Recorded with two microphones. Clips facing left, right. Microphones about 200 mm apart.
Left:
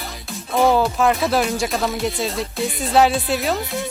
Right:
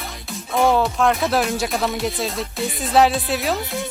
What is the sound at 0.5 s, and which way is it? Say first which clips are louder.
Speech: left 1 dB; centre (ahead or behind).